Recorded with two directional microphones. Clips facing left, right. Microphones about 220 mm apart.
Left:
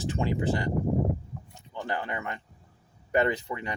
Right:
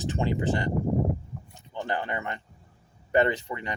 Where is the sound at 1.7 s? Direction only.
30° right (ahead or behind).